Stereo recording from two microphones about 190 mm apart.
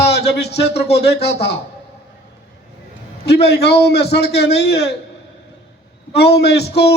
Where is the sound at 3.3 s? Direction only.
60° left (ahead or behind).